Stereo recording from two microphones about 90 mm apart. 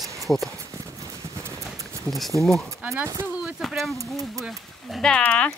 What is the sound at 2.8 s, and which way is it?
Speech, 10° right (ahead or behind).